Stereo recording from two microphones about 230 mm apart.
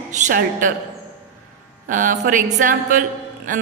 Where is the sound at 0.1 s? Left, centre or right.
Right.